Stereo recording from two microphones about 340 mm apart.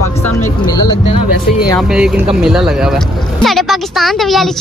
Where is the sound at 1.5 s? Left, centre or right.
Centre.